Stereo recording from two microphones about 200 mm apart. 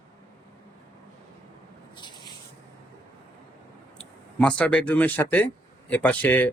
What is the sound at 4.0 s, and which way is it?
Speech, 5° left (ahead or behind).